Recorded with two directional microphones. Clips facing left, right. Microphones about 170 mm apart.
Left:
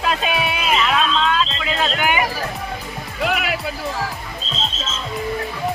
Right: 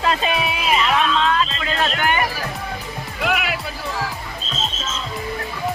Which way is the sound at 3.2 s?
45° left (ahead or behind).